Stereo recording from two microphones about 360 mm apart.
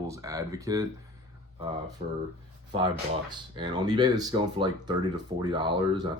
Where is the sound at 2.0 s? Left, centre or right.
Centre.